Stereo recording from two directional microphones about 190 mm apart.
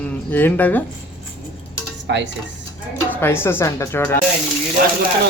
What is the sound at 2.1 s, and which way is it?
Dishes, 65° right (ahead or behind).